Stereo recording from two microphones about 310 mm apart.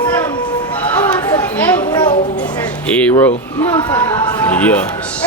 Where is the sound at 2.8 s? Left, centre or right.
Centre.